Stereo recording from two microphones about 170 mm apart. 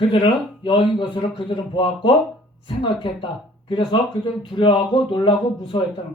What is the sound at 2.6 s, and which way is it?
Speech, 30° left (ahead or behind).